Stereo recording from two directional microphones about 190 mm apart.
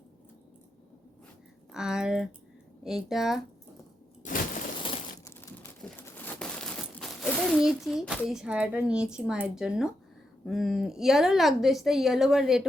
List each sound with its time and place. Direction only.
1.7 s a woman's voice: 5° right (ahead or behind)
4.2 s a sound: 40° left (ahead or behind)
4.8 s crushing: 30° left (ahead or behind)
6.0 s a child's voice: 10° left (ahead or behind)